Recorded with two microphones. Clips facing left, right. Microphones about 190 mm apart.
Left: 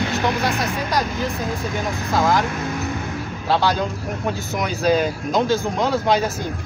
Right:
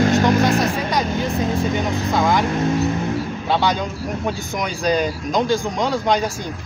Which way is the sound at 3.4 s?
Centre (ahead or behind).